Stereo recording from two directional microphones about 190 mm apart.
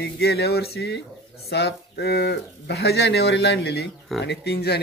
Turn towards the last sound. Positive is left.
turn(degrees=60)  # may be behind; listen again after turning